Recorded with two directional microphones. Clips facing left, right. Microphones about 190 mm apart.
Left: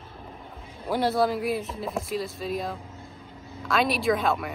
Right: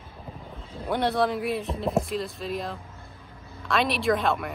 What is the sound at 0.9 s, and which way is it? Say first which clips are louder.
Speech: left 1 dB; centre (ahead or behind).